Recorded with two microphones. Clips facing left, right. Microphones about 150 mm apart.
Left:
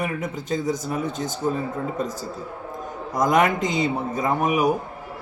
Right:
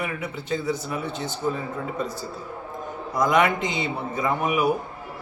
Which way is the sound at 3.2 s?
45° left (ahead or behind).